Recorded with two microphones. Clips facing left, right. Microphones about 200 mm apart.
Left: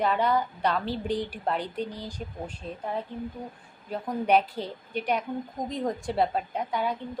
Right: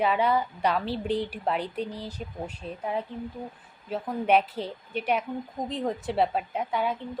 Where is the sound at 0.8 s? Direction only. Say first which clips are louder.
Right 1 dB; 30° right (ahead or behind).